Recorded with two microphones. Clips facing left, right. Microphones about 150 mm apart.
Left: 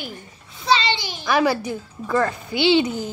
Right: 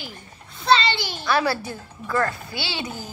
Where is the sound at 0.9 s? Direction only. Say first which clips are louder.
Left 2 dB; 15° left (ahead or behind).